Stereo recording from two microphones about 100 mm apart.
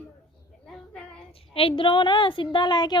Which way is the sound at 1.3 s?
70° left (ahead or behind).